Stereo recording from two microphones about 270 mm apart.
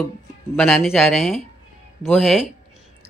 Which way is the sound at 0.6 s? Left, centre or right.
Centre.